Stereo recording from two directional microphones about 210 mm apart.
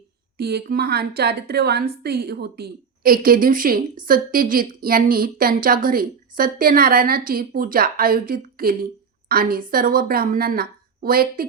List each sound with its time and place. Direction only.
0.3 s a woman's voice: 50° right (ahead or behind)